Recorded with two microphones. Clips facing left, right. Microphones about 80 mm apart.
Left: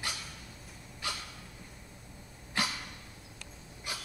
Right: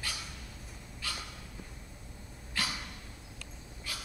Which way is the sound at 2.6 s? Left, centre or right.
Left.